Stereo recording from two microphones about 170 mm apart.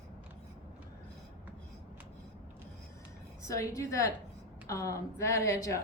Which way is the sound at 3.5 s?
20° left (ahead or behind).